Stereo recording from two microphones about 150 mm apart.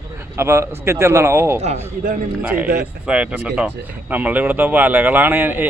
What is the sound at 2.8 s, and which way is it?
A man's voice, 5° right (ahead or behind).